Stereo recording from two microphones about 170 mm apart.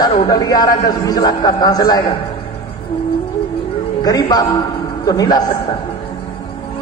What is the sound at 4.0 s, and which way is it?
A woman's voice, 20° left (ahead or behind).